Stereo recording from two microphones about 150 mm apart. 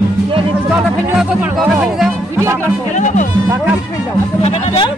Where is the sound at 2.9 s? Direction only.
55° left (ahead or behind).